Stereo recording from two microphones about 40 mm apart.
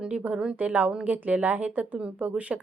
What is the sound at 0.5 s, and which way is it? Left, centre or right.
A woman's voice, right.